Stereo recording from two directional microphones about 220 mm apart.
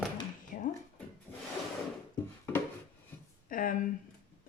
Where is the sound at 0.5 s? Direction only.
40° left (ahead or behind).